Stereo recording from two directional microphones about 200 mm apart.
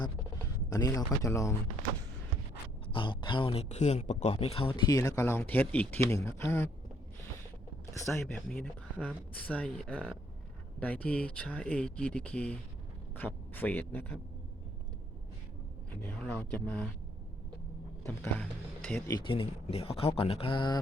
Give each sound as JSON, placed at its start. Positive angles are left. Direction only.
{"t": 0.7, "sound": "speech", "side_deg": 15}
{"t": 2.8, "sound": "speech", "side_deg": 25}
{"t": 8.2, "sound": "speech", "side_deg": 5}
{"t": 16.0, "sound": "speech", "side_deg": 10}
{"t": 18.0, "sound": "speech", "side_deg": 10}
{"t": 19.1, "sound": "speech", "side_deg": 25}